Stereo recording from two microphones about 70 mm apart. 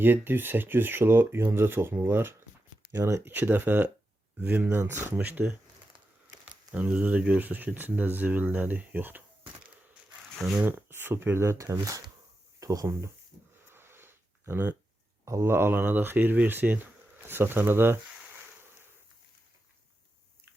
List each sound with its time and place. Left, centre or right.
0.0 s speech: right
6.7 s speech: centre
10.6 s speech: right
13.7 s a sound: right
15.2 s speech: right